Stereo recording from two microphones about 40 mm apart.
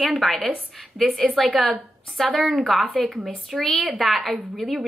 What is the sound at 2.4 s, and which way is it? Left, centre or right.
A woman's voice, centre.